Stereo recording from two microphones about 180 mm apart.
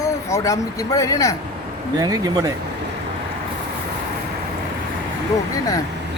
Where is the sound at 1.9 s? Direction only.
20° right (ahead or behind).